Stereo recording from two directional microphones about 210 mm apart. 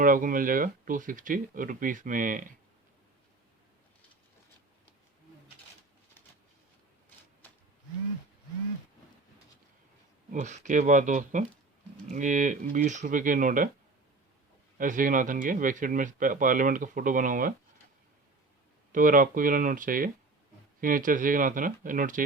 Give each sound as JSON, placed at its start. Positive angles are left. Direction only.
{"t": 0.0, "sound": "speech", "side_deg": -40}
{"t": 10.3, "sound": "speech", "side_deg": -35}
{"t": 14.8, "sound": "speech", "side_deg": -40}
{"t": 18.9, "sound": "speech", "side_deg": -40}